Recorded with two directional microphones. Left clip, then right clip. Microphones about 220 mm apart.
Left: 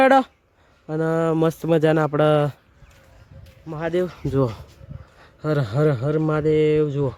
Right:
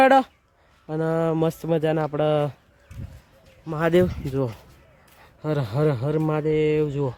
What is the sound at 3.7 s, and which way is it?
Speech, 35° right (ahead or behind).